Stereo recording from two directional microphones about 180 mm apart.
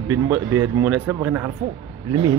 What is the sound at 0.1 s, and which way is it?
Speech, 15° right (ahead or behind).